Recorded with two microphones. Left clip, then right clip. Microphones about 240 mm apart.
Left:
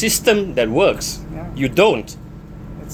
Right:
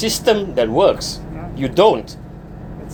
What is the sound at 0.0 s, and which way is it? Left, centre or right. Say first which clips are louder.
Speech: even; left.